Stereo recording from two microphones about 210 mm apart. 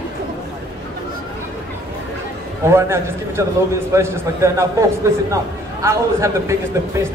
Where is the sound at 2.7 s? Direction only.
10° right (ahead or behind).